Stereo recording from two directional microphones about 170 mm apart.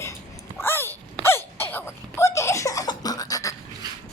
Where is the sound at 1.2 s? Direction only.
15° left (ahead or behind).